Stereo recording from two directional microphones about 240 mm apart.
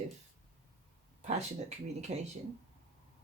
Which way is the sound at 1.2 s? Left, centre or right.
Right.